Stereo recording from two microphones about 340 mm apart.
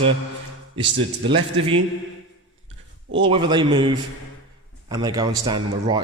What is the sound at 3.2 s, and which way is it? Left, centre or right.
A man's voice, centre.